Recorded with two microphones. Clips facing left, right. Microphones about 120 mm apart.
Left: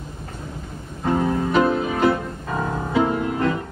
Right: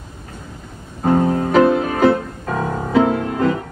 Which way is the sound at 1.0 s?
50° right (ahead or behind).